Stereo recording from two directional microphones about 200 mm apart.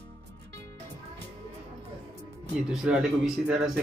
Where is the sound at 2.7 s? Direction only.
5° right (ahead or behind).